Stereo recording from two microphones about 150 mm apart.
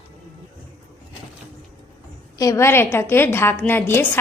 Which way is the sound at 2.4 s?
20° left (ahead or behind).